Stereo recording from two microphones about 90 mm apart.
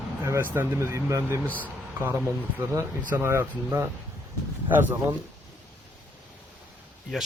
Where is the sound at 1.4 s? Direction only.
20° left (ahead or behind).